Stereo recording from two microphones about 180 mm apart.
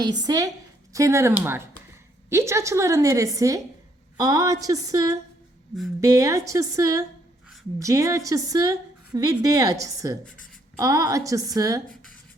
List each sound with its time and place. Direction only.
0.0 s a woman's voice: 25° right (ahead or behind)